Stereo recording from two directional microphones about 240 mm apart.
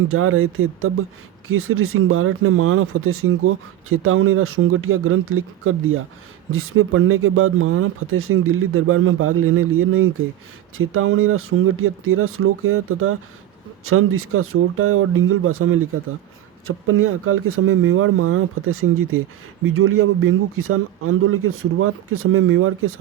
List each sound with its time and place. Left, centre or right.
0.1 s speech: right